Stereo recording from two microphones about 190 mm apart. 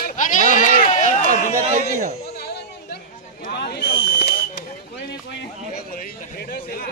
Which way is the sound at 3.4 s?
55° left (ahead or behind).